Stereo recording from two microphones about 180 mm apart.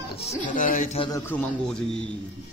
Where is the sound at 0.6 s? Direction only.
45° left (ahead or behind).